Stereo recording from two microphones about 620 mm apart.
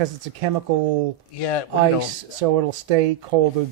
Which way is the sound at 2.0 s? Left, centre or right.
Right.